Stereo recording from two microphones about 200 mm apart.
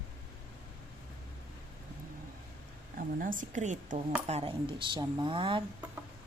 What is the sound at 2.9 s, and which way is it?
A woman's voice, 40° right (ahead or behind).